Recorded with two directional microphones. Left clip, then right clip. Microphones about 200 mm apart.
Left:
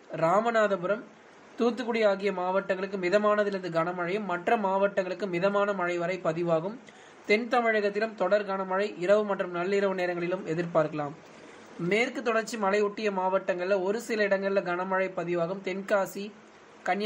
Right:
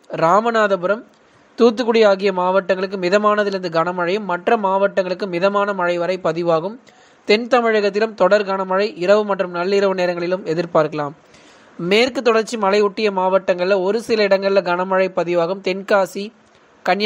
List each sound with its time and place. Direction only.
0.1 s a man's voice: 35° right (ahead or behind)